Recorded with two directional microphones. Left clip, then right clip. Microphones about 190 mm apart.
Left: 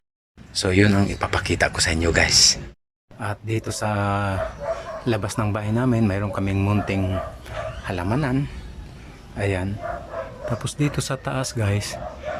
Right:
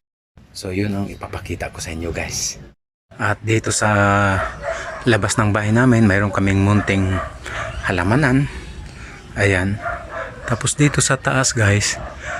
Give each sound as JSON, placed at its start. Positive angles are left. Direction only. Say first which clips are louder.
{"t": 0.5, "sound": "speech", "louder": "left 5 dB", "side_deg": -10}
{"t": 3.2, "sound": "speech", "louder": "right 9 dB", "side_deg": 0}